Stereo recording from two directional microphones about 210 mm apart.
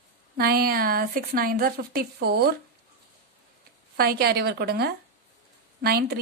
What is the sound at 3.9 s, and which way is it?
A woman's voice, 50° right (ahead or behind).